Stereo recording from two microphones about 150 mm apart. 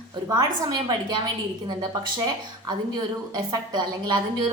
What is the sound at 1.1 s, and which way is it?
Speech, 30° right (ahead or behind).